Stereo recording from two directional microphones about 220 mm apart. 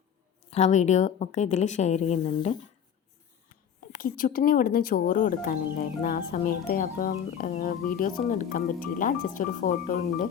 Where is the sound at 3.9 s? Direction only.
40° left (ahead or behind).